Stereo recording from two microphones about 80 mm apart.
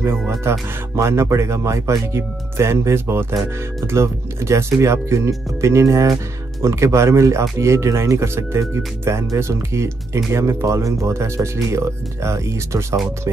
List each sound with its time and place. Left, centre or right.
0.4 s speech: right